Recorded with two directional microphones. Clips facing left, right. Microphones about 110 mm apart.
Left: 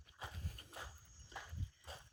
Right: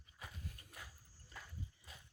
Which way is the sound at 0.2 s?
25° left (ahead or behind).